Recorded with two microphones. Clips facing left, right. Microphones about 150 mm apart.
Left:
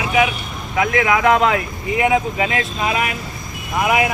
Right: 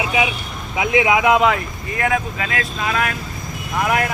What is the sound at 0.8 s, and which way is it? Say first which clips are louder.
Speech: even; 15° right (ahead or behind).